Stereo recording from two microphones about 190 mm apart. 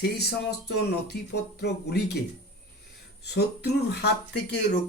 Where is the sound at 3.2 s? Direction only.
60° left (ahead or behind).